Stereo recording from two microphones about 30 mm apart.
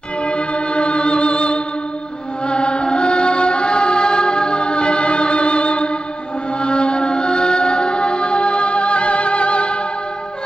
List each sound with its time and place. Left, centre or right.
0.2 s music: left